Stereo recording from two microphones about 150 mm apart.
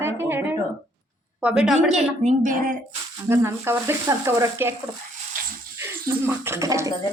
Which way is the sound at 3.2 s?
15° right (ahead or behind).